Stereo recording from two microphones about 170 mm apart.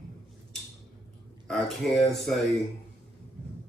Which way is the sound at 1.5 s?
Centre (ahead or behind).